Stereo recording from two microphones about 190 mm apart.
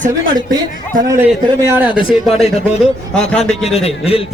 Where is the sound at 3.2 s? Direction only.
5° left (ahead or behind).